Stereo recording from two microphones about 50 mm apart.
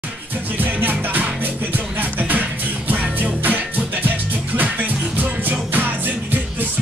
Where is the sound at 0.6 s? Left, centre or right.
Right.